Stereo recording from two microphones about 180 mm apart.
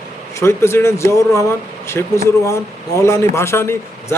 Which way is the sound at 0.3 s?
15° left (ahead or behind).